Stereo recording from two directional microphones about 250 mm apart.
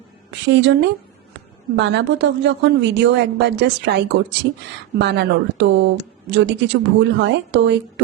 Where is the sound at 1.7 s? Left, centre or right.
Right.